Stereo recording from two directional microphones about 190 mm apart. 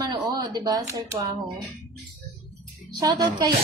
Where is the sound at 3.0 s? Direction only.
20° right (ahead or behind).